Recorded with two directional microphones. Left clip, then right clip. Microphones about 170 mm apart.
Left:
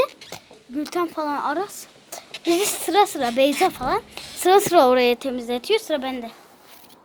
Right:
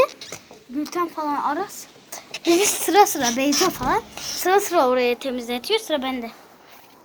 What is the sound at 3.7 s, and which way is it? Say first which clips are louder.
Speech: right 1 dB; 25° left (ahead or behind).